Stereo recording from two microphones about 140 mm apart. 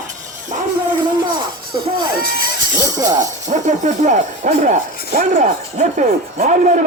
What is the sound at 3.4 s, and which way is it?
Speech, 60° right (ahead or behind).